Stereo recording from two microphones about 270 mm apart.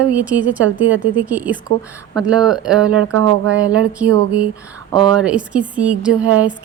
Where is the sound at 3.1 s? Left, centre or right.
Right.